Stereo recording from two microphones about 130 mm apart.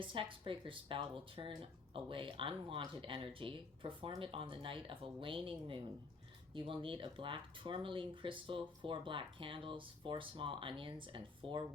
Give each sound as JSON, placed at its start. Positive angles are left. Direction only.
{"t": 0.0, "sound": "speech", "side_deg": -40}